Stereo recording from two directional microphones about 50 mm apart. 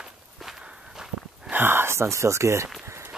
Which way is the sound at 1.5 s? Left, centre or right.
Right.